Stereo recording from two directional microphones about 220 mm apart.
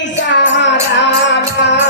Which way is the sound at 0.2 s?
55° left (ahead or behind).